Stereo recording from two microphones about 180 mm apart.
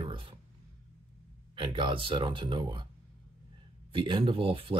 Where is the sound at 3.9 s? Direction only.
30° right (ahead or behind).